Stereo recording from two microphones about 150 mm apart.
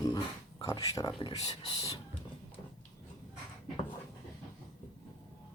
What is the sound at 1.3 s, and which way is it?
Speech, 45° left (ahead or behind).